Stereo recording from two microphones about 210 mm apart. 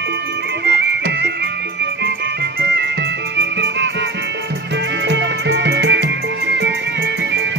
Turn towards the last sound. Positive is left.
turn(degrees=-55)  # may be behind; listen again after turning